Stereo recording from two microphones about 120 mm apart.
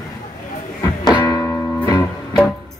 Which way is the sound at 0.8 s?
35° left (ahead or behind).